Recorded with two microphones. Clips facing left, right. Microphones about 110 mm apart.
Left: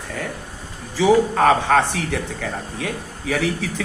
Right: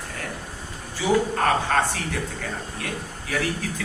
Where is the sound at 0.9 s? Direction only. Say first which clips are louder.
Left 6 dB; 90° left.